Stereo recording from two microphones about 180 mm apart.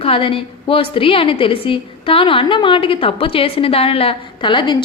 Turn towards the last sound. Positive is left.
turn(degrees=25)  # may be behind; listen again after turning